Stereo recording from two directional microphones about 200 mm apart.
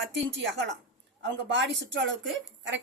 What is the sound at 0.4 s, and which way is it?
A woman's voice, 65° right (ahead or behind).